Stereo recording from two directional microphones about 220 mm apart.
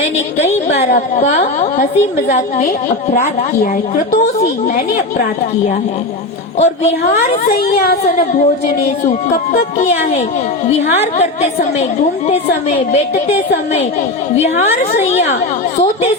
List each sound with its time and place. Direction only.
0.8 s a woman's voice: 35° left (ahead or behind)
6.6 s a woman's voice: 30° left (ahead or behind)
7.8 s speech: 45° left (ahead or behind)
9.5 s a woman's voice: 35° left (ahead or behind)
12.3 s a woman's voice: 30° left (ahead or behind)
14.4 s a woman's voice: 30° left (ahead or behind)